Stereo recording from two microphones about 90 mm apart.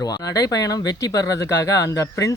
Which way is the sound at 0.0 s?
45° left (ahead or behind).